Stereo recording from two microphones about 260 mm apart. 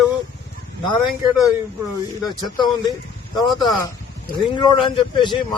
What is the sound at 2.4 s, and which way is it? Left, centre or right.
Speech, centre.